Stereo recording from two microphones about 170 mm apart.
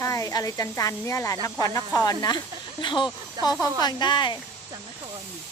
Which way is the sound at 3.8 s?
25° left (ahead or behind).